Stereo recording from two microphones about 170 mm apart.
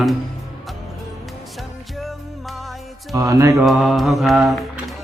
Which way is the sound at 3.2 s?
20° right (ahead or behind).